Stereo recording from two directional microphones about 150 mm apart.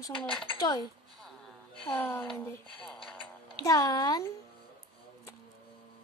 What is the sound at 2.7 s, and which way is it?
Speech, centre (ahead or behind).